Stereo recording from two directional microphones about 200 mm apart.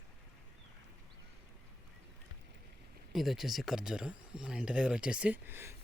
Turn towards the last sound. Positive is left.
turn(degrees=-10)  # may be behind; listen again after turning